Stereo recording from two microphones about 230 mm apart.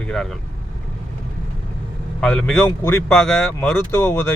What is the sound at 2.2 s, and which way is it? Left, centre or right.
Speech, centre.